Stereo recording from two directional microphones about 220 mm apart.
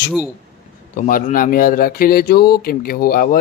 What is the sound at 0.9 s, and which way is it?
Speech, 40° left (ahead or behind).